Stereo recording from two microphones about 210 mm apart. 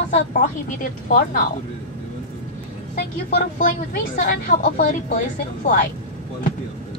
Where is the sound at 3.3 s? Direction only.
40° left (ahead or behind).